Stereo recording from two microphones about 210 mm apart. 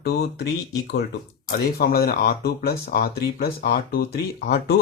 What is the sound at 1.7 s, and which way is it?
Speech, 50° left (ahead or behind).